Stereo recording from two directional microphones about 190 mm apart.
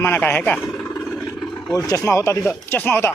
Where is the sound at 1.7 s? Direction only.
15° left (ahead or behind).